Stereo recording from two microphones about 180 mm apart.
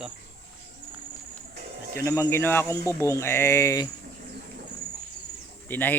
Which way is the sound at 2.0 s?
15° left (ahead or behind).